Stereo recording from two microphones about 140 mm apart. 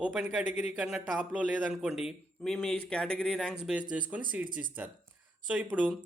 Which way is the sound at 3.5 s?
5° right (ahead or behind).